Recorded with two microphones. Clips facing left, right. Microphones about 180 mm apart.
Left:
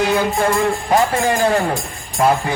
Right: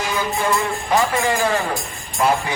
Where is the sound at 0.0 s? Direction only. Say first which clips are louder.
Left 6 dB; 60° left (ahead or behind).